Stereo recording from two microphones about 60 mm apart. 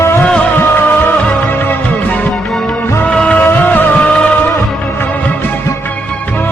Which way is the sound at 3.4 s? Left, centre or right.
Left.